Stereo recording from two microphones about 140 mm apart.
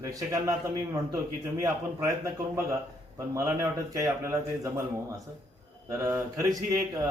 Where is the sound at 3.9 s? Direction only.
20° right (ahead or behind).